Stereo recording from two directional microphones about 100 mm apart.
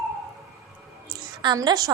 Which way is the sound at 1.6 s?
35° right (ahead or behind).